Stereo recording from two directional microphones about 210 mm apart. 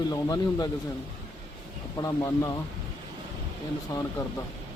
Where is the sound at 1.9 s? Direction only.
15° left (ahead or behind).